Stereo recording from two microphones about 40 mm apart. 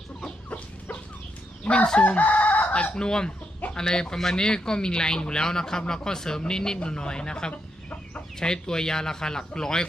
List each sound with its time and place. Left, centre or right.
1.6 s chicken: left
3.0 s a man's voice: centre
7.5 s chicken: left
8.4 s speech: centre